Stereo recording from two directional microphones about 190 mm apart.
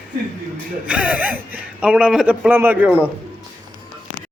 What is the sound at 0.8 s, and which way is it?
A man's voice, 5° right (ahead or behind).